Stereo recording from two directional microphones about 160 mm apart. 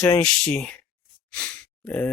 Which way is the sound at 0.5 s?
5° left (ahead or behind).